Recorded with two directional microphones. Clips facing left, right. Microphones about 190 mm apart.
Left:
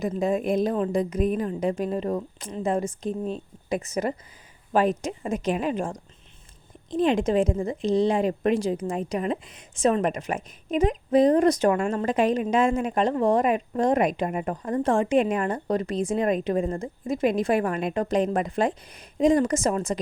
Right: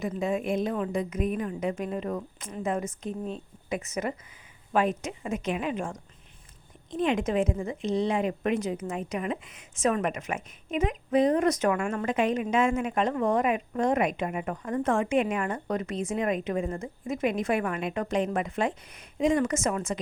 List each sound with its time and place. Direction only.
0.0 s a woman's voice: 40° left (ahead or behind)